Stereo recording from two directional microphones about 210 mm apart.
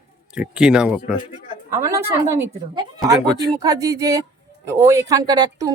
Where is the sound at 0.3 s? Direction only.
5° right (ahead or behind).